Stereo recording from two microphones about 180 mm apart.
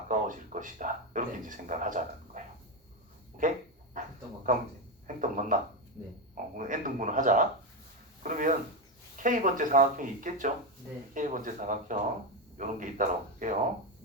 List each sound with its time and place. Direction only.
0.1 s speech: 45° right (ahead or behind)
3.4 s speech: 45° right (ahead or behind)
4.0 s dog: 45° right (ahead or behind)
5.0 s speech: 45° right (ahead or behind)